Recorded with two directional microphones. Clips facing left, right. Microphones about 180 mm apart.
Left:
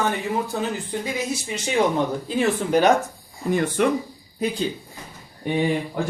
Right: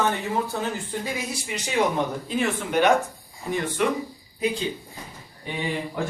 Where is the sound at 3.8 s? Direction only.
45° left (ahead or behind).